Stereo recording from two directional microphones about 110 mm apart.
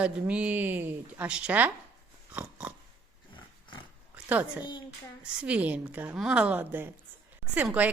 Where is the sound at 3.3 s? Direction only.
45° left (ahead or behind).